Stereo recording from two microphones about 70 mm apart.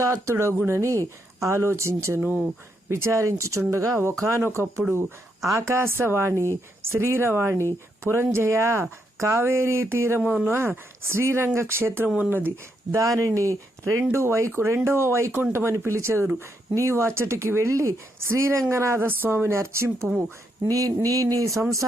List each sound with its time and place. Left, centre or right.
0.0 s speech: right
5.4 s speech: right
10.2 s speech: right
10.5 s speech: right
12.0 s speech: centre
12.9 s speech: right
20.1 s speech: centre
20.7 s a sound: right